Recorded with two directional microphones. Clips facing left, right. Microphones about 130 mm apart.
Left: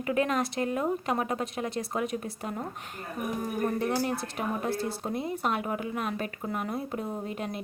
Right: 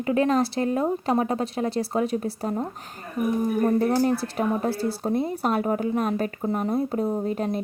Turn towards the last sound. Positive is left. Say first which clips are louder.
# right 9 dB
turn(degrees=-35)  # may be behind; listen again after turning